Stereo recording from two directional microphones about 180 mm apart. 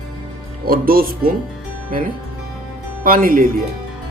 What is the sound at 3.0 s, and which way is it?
Speech, 50° right (ahead or behind).